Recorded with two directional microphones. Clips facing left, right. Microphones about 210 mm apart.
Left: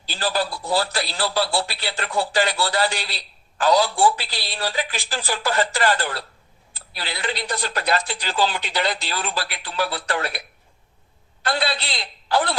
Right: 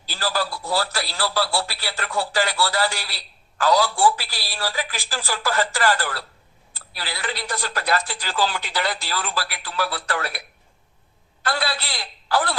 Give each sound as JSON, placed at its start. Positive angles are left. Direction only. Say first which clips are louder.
{"t": 0.0, "sound": "a man's voice", "louder": "left 2 dB", "side_deg": 20}
{"t": 11.4, "sound": "a man's voice", "louder": "left 2 dB", "side_deg": 20}